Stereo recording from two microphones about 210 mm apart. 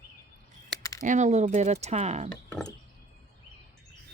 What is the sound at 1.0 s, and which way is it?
Speech, 35° right (ahead or behind).